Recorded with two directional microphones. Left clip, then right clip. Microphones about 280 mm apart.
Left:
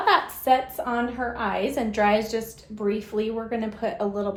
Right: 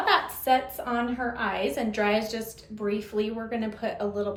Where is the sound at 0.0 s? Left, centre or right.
Left.